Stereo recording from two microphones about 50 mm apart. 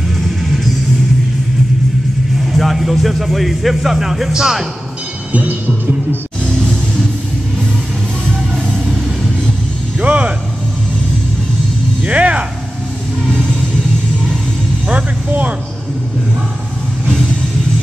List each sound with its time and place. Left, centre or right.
2.5 s speech: centre
5.3 s music: right
9.9 s a sound: right
12.1 s music: right
14.9 s music: right